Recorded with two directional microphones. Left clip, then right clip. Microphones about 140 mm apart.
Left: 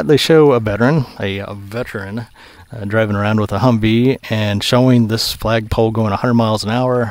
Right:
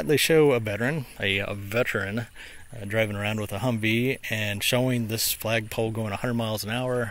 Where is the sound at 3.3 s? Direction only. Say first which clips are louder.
Left 13 dB; 60° left (ahead or behind).